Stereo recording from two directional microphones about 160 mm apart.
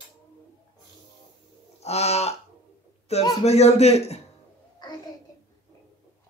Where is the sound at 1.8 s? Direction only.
40° left (ahead or behind).